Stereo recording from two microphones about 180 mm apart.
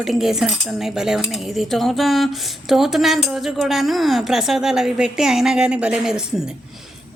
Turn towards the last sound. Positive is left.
turn(degrees=-5)  # may be behind; listen again after turning